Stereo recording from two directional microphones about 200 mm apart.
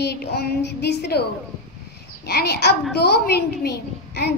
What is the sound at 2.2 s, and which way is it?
A woman's voice, 50° left (ahead or behind).